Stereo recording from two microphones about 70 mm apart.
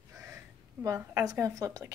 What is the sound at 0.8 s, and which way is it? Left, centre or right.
A woman's voice, right.